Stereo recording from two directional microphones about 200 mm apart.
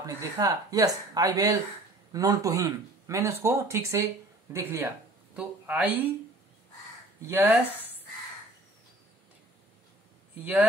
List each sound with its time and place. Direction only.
0.0 s speech: 15° right (ahead or behind)
7.2 s speech: 10° right (ahead or behind)